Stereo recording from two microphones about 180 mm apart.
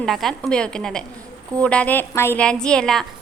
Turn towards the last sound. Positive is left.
turn(degrees=5)  # may be behind; listen again after turning